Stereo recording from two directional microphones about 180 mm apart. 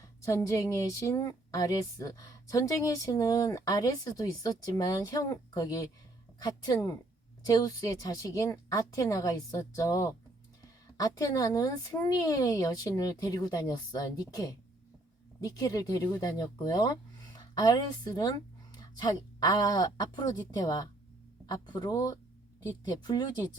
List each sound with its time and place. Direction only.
0.2 s a woman's voice: 15° left (ahead or behind)